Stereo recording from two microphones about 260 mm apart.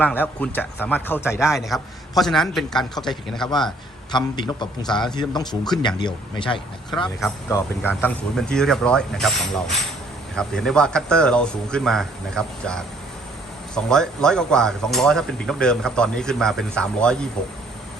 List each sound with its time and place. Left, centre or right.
0.0 s a man's voice: centre
4.1 s a man's voice: centre